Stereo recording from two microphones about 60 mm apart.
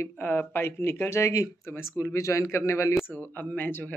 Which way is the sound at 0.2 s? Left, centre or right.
Left.